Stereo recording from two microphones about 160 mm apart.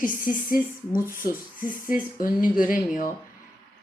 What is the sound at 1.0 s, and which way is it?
Speech, 60° left (ahead or behind).